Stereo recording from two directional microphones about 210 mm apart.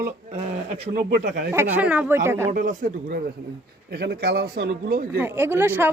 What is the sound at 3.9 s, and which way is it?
Speech, 50° right (ahead or behind).